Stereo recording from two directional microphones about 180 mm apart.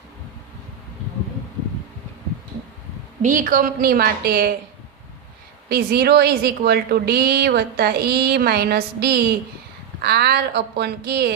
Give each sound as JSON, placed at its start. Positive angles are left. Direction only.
{"t": 3.2, "sound": "a woman's voice", "side_deg": -45}
{"t": 5.6, "sound": "a woman's voice", "side_deg": -60}